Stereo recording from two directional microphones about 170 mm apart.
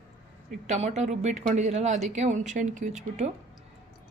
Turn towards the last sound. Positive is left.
turn(degrees=-45)  # may be behind; listen again after turning